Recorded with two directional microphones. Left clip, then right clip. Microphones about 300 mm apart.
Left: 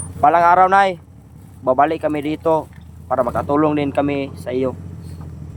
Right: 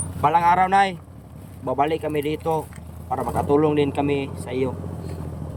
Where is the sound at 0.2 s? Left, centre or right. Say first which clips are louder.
Left 6 dB; centre.